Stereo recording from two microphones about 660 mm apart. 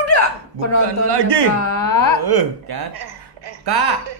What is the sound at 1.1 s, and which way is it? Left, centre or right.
Speech, right.